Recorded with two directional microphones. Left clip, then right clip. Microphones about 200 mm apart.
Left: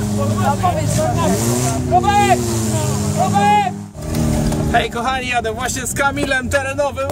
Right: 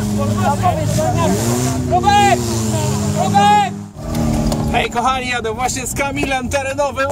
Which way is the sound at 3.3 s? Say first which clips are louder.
Right 3 dB; 30° right (ahead or behind).